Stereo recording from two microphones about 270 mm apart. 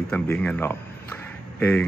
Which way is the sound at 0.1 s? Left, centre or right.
Centre.